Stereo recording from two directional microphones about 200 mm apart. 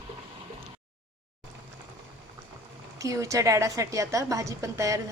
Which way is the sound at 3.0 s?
15° right (ahead or behind).